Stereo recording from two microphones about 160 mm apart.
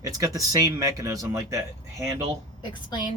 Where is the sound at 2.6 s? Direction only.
30° left (ahead or behind).